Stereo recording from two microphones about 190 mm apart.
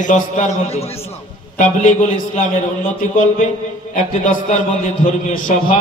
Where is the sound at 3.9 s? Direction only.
40° left (ahead or behind).